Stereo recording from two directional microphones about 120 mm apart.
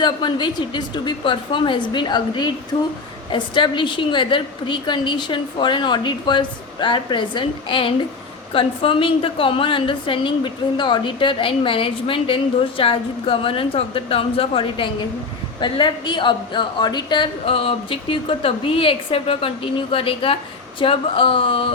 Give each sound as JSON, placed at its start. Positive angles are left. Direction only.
{"t": 0.0, "sound": "a woman's voice", "side_deg": 40}